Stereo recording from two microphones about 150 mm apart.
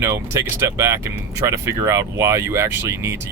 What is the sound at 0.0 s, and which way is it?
Speech, 15° right (ahead or behind).